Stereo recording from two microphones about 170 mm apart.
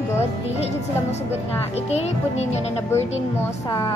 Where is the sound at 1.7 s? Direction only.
40° left (ahead or behind).